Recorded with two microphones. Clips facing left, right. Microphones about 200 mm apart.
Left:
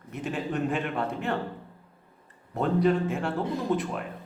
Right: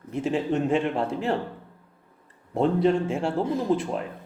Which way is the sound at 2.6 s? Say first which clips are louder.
Right 3 dB; 25° right (ahead or behind).